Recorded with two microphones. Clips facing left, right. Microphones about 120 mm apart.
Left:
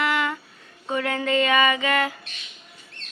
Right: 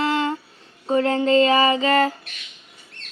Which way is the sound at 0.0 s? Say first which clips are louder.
Right 3 dB; 30° right (ahead or behind).